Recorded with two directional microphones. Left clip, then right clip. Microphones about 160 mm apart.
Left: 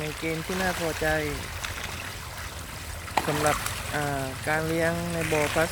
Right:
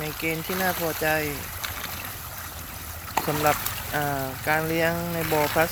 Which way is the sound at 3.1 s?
25° right (ahead or behind).